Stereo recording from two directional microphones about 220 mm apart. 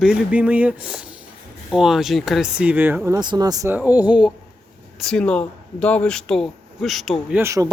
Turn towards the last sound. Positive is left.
turn(degrees=-15)  # may be behind; listen again after turning